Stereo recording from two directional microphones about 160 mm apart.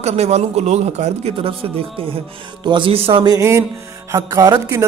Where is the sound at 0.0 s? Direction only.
40° right (ahead or behind).